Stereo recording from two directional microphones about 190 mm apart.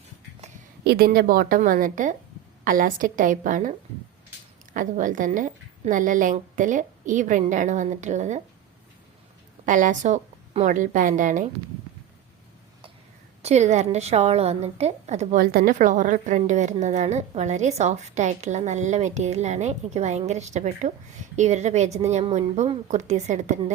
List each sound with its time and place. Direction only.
0.9 s a woman's voice: 55° right (ahead or behind)
9.6 s a woman's voice: 40° right (ahead or behind)
13.4 s a woman's voice: 35° right (ahead or behind)